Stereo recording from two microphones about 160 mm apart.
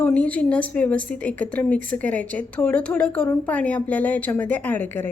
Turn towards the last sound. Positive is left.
turn(degrees=10)  # may be behind; listen again after turning